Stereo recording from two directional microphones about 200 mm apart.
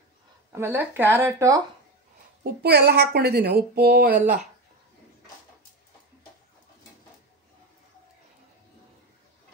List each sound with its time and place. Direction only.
0.5 s speech: 10° right (ahead or behind)
2.4 s a woman's voice: 50° right (ahead or behind)